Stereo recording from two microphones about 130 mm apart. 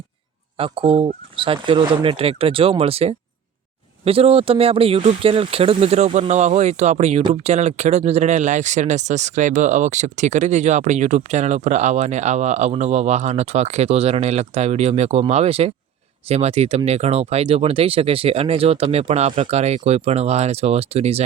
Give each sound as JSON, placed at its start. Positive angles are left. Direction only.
{"t": 0.5, "sound": "speech", "side_deg": -45}